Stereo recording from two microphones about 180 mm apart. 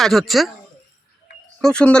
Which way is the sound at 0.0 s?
Centre (ahead or behind).